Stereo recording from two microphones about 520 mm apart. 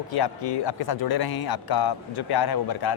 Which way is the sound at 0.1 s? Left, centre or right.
Left.